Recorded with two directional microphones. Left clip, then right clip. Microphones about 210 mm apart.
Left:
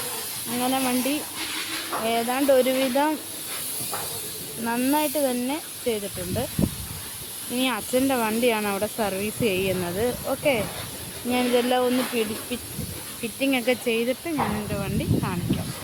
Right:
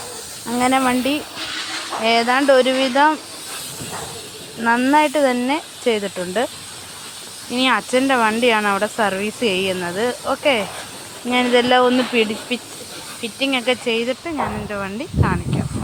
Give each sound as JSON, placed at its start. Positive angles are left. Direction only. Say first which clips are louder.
{"t": 0.6, "sound": "speech", "louder": "right 8 dB", "side_deg": -20}
{"t": 4.6, "sound": "speech", "louder": "right 9 dB", "side_deg": -5}
{"t": 7.5, "sound": "speech", "louder": "right 8 dB", "side_deg": -5}
{"t": 13.2, "sound": "speech", "louder": "right 4 dB", "side_deg": 5}